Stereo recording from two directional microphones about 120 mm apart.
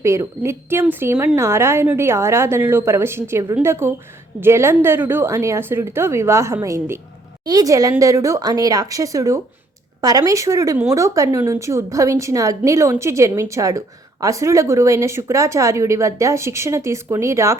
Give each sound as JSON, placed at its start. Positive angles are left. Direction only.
{"t": 0.0, "sound": "a woman's voice", "side_deg": -25}